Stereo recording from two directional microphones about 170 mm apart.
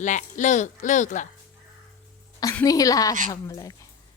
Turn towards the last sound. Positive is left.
turn(degrees=20)  # may be behind; listen again after turning